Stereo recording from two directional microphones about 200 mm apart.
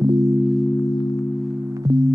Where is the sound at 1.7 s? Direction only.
20° right (ahead or behind).